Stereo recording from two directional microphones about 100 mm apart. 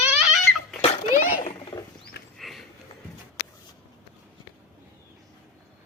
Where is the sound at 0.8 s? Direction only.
90° left.